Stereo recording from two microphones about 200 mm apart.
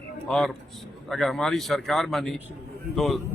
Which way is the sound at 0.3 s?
Centre (ahead or behind).